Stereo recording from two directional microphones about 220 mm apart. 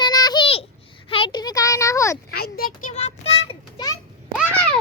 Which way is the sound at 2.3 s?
45° left (ahead or behind).